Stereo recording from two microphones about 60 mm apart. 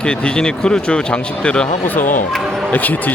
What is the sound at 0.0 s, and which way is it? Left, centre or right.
Speech, centre.